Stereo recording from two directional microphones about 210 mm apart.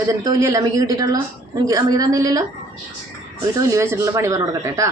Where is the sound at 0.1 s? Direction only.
15° right (ahead or behind).